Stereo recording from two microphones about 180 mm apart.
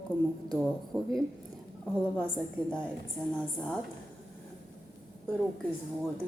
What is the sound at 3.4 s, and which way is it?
Speech, 5° left (ahead or behind).